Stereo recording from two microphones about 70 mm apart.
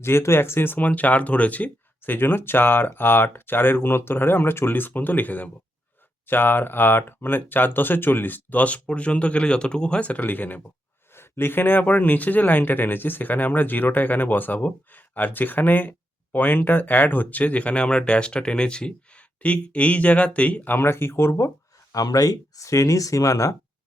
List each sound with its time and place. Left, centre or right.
0.0 s speech: left
21.9 s speech: left